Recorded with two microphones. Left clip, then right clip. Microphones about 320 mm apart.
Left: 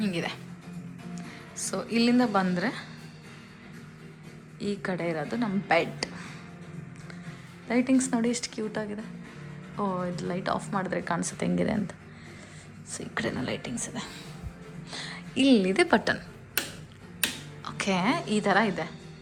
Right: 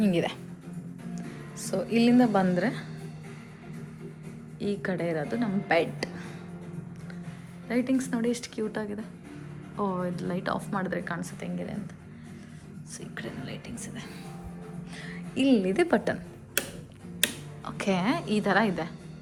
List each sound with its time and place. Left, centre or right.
0.0 s a woman's voice: centre
4.6 s a woman's voice: centre
7.7 s a woman's voice: centre
12.9 s a woman's voice: centre
17.7 s a woman's voice: centre